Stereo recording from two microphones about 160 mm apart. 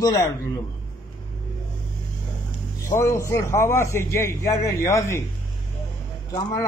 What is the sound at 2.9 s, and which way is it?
A man's voice, 15° left (ahead or behind).